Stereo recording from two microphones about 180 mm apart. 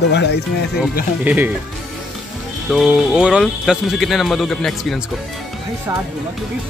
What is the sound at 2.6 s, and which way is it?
Speech, centre (ahead or behind).